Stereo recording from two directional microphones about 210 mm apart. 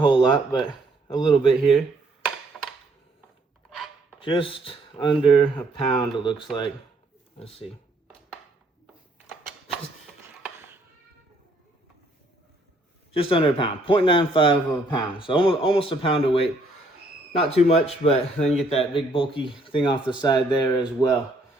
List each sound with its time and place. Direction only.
0.3 s speech: 25° left (ahead or behind)
2.5 s a sound: 5° left (ahead or behind)
4.2 s speech: 25° left (ahead or behind)
13.1 s speech: 25° left (ahead or behind)
17.5 s speech: 30° left (ahead or behind)